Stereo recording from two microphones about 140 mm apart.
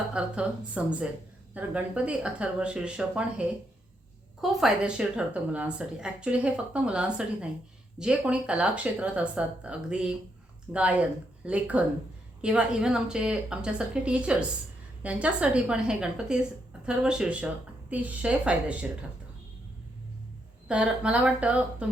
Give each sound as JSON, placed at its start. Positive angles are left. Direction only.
{"t": 0.1, "sound": "a woman's voice", "side_deg": -5}
{"t": 20.7, "sound": "a woman's voice", "side_deg": -5}